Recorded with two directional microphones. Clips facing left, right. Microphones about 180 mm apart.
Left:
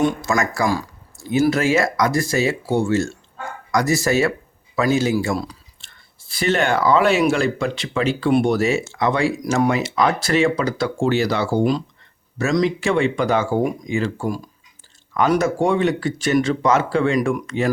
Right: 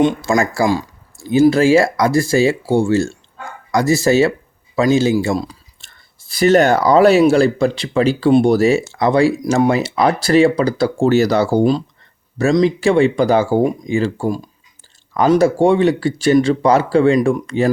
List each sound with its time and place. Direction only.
0.0 s speech: 30° right (ahead or behind)
5.8 s speech: 40° right (ahead or behind)